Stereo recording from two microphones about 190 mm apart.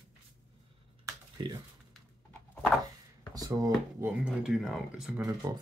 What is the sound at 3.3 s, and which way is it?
Speech, 20° right (ahead or behind).